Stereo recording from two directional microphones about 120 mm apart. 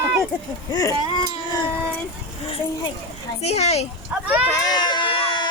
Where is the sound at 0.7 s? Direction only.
30° left (ahead or behind).